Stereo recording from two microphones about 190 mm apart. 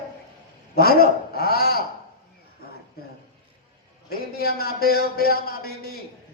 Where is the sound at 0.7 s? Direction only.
55° left (ahead or behind).